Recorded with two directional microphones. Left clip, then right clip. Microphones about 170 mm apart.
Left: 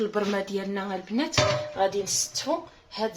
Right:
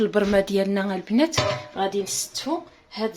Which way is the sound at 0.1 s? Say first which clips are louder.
Right 7 dB; 65° right (ahead or behind).